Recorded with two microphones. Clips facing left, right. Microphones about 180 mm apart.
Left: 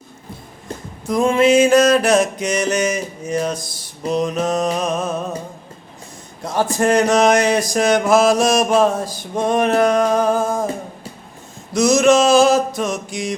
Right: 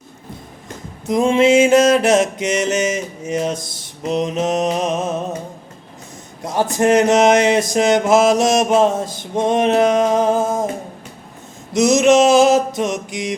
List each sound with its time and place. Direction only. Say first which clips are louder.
1.0 s mantra: right 1 dB; 25° right (ahead or behind)
6.4 s mantra: right 1 dB; 20° right (ahead or behind)
11.7 s mantra: right 1 dB; 20° right (ahead or behind)